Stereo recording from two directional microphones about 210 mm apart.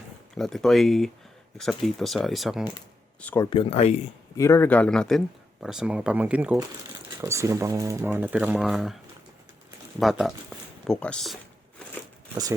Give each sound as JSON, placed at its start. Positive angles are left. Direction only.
{"t": 0.3, "sound": "speech", "side_deg": 0}
{"t": 3.2, "sound": "speech", "side_deg": 10}
{"t": 3.5, "sound": "speech", "side_deg": 25}
{"t": 4.4, "sound": "speech", "side_deg": 15}
{"t": 10.0, "sound": "speech", "side_deg": 0}
{"t": 12.3, "sound": "speech", "side_deg": -15}